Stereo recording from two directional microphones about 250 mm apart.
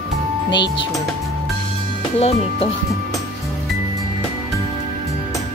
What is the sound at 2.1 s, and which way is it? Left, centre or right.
Speech, left.